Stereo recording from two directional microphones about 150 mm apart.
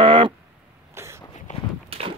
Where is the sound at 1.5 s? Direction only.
55° left (ahead or behind).